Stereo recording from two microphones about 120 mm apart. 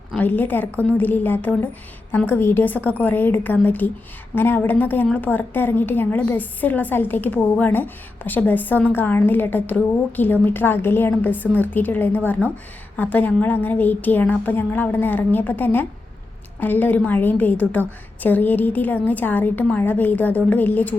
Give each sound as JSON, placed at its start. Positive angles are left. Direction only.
{"t": 0.2, "sound": "a woman's voice", "side_deg": 15}